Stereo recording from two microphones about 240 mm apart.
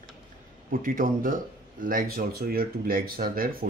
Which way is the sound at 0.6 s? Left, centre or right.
Right.